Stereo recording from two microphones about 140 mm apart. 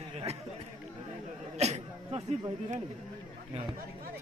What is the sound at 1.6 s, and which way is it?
Speech, 50° right (ahead or behind).